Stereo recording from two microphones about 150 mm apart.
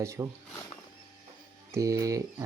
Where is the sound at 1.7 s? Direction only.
20° right (ahead or behind).